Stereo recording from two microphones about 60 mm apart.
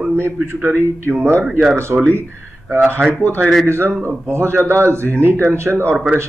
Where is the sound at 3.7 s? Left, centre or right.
Right.